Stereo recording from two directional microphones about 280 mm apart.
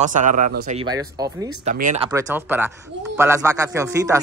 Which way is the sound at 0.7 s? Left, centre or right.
Centre.